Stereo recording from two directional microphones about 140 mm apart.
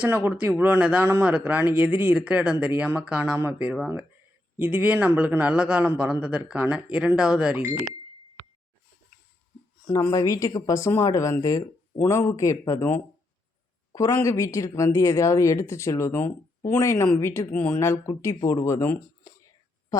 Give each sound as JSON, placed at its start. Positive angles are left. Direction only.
{"t": 0.0, "sound": "speech", "side_deg": -15}
{"t": 9.8, "sound": "speech", "side_deg": 25}
{"t": 19.9, "sound": "a sound", "side_deg": 25}